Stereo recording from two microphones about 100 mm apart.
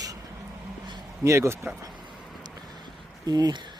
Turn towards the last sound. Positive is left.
turn(degrees=-40)  # may be behind; listen again after turning